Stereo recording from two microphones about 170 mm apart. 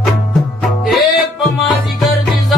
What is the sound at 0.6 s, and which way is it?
Music, centre (ahead or behind).